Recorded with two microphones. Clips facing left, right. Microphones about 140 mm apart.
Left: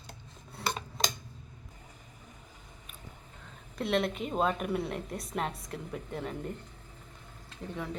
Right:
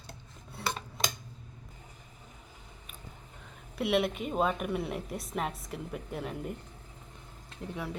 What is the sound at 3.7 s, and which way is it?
A woman's voice, 5° right (ahead or behind).